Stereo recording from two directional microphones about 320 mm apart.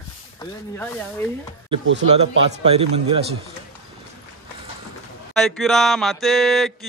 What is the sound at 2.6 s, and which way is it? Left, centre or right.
Speech, centre.